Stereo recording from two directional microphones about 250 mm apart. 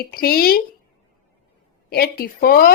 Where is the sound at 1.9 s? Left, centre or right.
Left.